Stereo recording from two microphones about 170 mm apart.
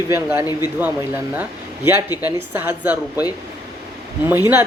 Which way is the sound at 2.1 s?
20° left (ahead or behind).